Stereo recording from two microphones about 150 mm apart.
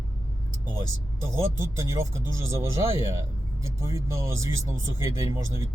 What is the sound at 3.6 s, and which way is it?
Speech, 20° right (ahead or behind).